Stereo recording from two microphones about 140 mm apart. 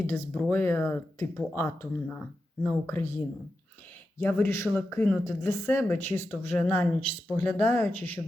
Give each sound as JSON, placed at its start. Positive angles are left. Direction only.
{"t": 0.1, "sound": "speech", "side_deg": 15}
{"t": 4.2, "sound": "speech", "side_deg": 15}